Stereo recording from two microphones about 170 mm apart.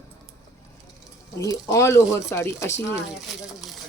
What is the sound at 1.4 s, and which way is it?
Speech, 20° left (ahead or behind).